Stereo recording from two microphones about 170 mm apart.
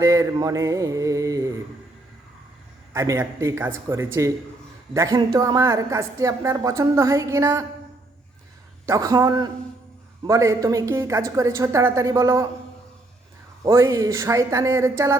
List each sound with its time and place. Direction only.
0.0 s a woman's voice: 20° right (ahead or behind)
2.9 s a woman's voice: 15° right (ahead or behind)
8.9 s a woman's voice: 20° right (ahead or behind)
13.6 s speech: 15° right (ahead or behind)